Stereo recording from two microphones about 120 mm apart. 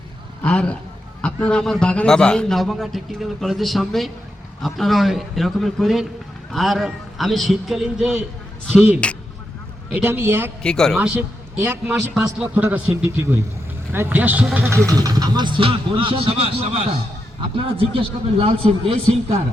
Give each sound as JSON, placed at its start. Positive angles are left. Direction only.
{"t": 0.4, "sound": "a man's voice", "side_deg": 10}
{"t": 9.0, "sound": "speech", "side_deg": 10}
{"t": 9.9, "sound": "a man's voice", "side_deg": -20}
{"t": 10.6, "sound": "a man's voice", "side_deg": 5}
{"t": 11.2, "sound": "a man's voice", "side_deg": -20}
{"t": 14.8, "sound": "speech", "side_deg": -30}